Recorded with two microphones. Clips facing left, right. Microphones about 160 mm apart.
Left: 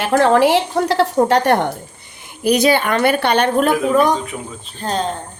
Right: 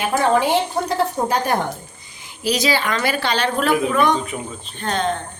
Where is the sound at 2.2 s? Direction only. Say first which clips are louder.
Left 6 dB; 55° left (ahead or behind).